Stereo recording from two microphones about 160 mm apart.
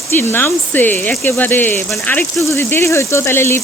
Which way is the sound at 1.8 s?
Centre (ahead or behind).